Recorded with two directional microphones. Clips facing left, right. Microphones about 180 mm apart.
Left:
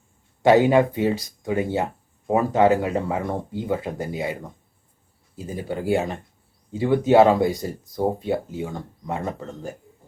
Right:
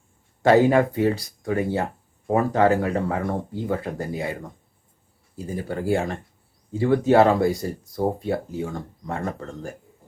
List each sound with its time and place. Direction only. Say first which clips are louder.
0.4 s speech: left 1 dB; 20° left (ahead or behind)
5.5 s speech: left 1 dB; 20° left (ahead or behind)